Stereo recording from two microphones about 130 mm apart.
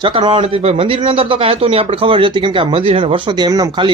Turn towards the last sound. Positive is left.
turn(degrees=-30)  # may be behind; listen again after turning